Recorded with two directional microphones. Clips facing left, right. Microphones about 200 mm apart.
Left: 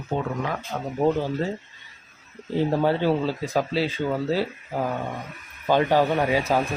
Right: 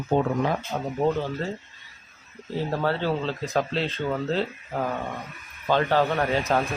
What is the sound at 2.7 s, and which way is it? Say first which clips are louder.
Speech: left 3 dB; 15° left (ahead or behind).